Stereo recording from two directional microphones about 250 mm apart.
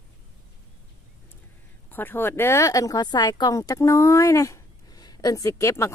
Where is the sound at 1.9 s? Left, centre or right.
Centre.